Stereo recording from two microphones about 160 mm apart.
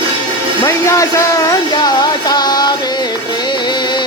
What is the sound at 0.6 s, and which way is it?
Speech, 20° left (ahead or behind).